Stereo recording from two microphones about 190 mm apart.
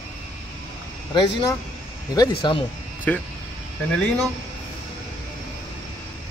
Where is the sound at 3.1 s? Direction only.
10° left (ahead or behind).